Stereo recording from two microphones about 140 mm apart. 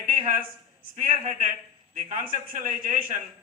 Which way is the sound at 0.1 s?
75° right (ahead or behind).